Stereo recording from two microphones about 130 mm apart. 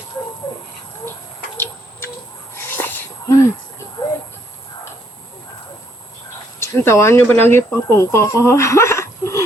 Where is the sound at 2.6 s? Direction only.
15° left (ahead or behind).